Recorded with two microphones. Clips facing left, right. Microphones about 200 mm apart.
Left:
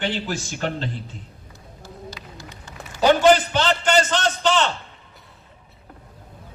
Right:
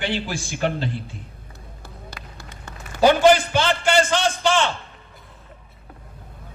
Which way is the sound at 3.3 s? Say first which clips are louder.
Even; 10° right (ahead or behind).